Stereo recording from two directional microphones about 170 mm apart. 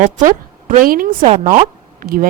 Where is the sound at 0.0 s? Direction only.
50° right (ahead or behind).